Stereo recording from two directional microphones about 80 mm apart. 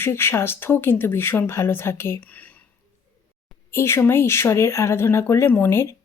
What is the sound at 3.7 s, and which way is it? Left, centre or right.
Speech, left.